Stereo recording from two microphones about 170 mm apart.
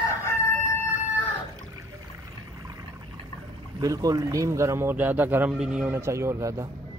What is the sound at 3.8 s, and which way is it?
A man's voice, 20° right (ahead or behind).